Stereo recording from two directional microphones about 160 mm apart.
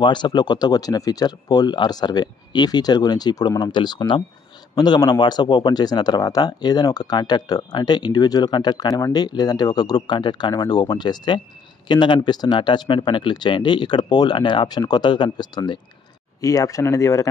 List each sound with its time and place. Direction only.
0.0 s speech: 30° left (ahead or behind)